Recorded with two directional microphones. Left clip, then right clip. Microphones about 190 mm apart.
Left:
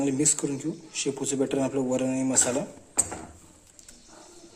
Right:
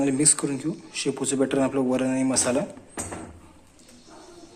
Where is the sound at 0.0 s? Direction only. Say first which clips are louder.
Right 3 dB; 15° left (ahead or behind).